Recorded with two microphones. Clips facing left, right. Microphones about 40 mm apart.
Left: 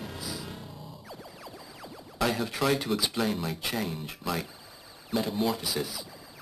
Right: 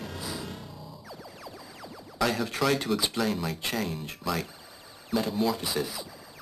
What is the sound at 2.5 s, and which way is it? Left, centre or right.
Speech, centre.